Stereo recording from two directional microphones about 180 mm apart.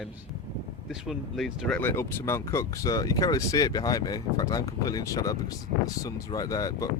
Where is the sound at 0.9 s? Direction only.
Centre (ahead or behind).